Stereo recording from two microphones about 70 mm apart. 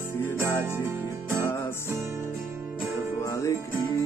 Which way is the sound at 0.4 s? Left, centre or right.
Right.